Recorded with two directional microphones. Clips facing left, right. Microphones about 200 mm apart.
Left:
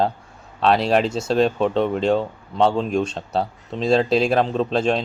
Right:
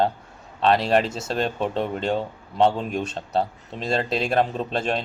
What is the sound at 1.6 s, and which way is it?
Speech, 30° left (ahead or behind).